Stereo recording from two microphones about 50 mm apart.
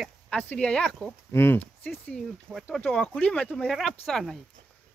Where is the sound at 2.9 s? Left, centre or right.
Centre.